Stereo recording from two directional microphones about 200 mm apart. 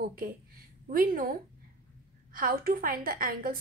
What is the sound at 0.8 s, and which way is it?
A woman's voice, 45° right (ahead or behind).